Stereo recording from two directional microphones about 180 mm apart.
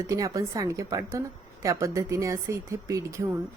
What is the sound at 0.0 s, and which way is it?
A woman's voice, 20° right (ahead or behind).